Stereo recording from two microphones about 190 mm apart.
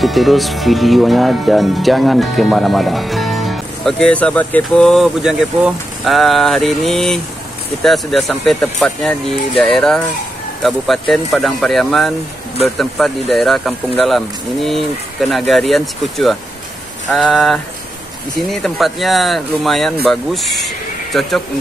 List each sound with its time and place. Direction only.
0.0 s speech: centre (ahead or behind)